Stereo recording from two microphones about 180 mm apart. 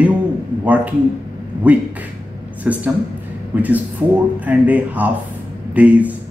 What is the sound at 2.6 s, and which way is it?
A woman's voice, 10° right (ahead or behind).